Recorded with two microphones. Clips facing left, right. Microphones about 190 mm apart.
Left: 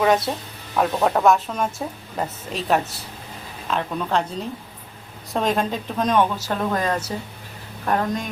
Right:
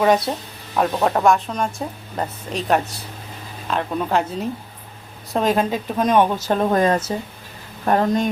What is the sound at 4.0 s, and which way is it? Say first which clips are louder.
Speech: right 3 dB; 10° right (ahead or behind).